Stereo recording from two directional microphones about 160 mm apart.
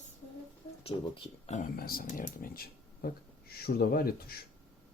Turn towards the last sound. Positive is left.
turn(degrees=70)  # may be behind; listen again after turning